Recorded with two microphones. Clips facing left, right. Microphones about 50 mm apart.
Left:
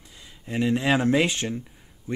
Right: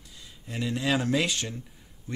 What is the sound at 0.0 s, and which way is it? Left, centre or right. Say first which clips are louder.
Speech: left 2 dB; left.